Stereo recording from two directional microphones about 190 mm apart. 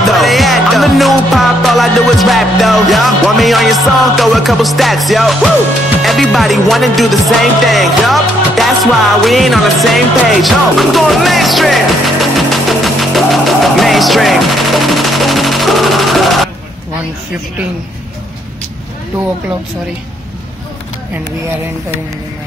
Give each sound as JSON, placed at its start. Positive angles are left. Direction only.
{"t": 0.0, "sound": "music", "side_deg": 0}